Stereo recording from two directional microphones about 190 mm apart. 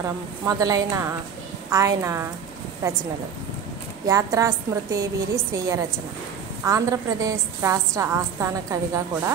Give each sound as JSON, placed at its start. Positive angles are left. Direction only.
{"t": 0.5, "sound": "a woman's voice", "side_deg": -20}
{"t": 4.1, "sound": "a woman's voice", "side_deg": -15}